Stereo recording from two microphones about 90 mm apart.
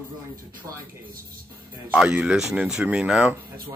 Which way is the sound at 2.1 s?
15° right (ahead or behind).